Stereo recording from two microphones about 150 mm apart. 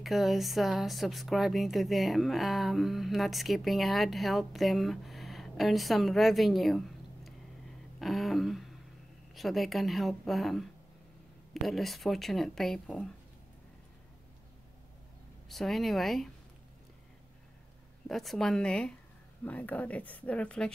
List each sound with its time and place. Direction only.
0.0 s speech: centre (ahead or behind)
8.0 s a sound: centre (ahead or behind)
9.3 s speech: centre (ahead or behind)
15.4 s speech: centre (ahead or behind)
18.0 s speech: centre (ahead or behind)